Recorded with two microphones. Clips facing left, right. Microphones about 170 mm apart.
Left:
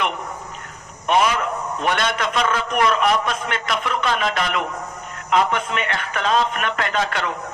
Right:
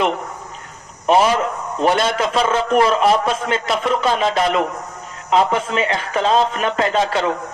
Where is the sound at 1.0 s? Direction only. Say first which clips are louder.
Right 4 dB; 35° right (ahead or behind).